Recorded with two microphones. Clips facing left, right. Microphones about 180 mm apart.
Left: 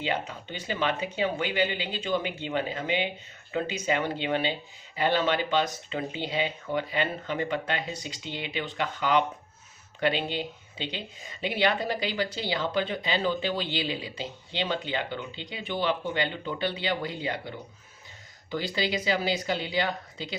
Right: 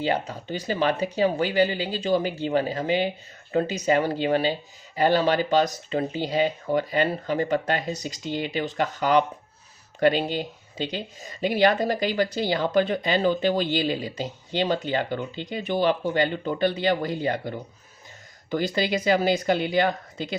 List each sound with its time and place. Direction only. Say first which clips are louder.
0.0 s speech: right 5 dB; 40° right (ahead or behind)
18.5 s speech: right 5 dB; 50° right (ahead or behind)